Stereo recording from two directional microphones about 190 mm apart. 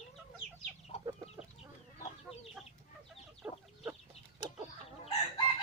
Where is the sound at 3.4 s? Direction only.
10° right (ahead or behind).